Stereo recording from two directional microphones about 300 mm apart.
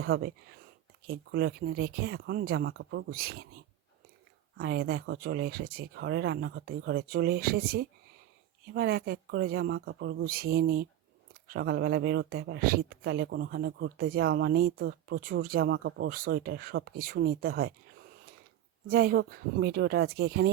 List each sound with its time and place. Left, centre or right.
0.0 s speech: right
4.5 s speech: right
18.9 s speech: right